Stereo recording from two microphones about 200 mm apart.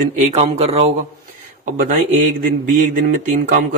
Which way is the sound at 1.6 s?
45° right (ahead or behind).